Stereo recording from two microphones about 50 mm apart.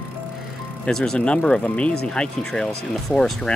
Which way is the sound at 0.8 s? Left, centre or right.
Centre.